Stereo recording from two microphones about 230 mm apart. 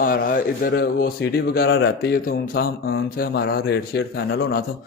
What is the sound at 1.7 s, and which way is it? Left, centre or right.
Speech, left.